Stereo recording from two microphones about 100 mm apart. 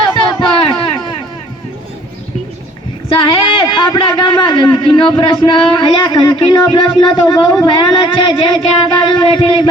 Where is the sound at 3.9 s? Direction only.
50° left (ahead or behind).